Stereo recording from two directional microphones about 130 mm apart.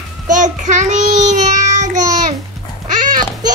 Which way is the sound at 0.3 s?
75° right (ahead or behind).